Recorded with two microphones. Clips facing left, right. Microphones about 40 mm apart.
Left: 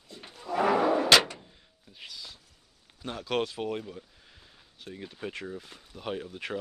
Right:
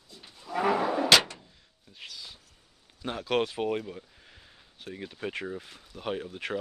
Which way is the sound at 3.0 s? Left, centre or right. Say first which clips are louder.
Right 2 dB; centre.